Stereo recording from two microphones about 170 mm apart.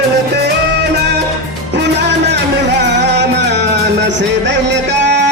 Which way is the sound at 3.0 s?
90° right.